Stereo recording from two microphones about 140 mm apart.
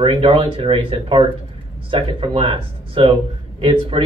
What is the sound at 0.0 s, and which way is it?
Speech, 40° right (ahead or behind).